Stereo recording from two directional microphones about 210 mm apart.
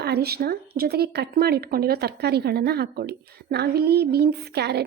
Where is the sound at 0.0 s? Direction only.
50° right (ahead or behind).